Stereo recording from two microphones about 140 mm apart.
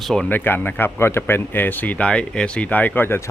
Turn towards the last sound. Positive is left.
turn(degrees=15)  # may be behind; listen again after turning